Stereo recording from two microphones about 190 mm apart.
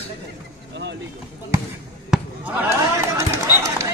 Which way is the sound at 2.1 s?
10° right (ahead or behind).